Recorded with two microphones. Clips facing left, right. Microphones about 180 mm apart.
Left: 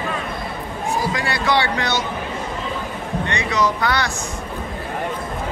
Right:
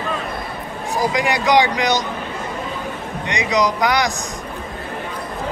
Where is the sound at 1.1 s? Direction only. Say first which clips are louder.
Right 7 dB; 15° right (ahead or behind).